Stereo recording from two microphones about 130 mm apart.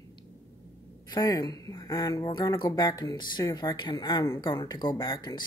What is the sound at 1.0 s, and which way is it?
Speech, 30° left (ahead or behind).